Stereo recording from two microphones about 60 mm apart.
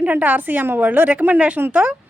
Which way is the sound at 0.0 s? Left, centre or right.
Right.